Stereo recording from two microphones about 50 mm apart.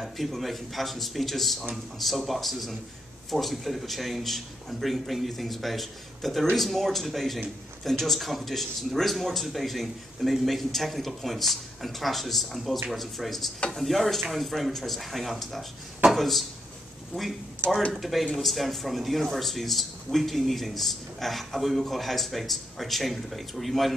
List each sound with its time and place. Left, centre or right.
0.0 s speech: centre
17.6 s speech: right
18.0 s speech: centre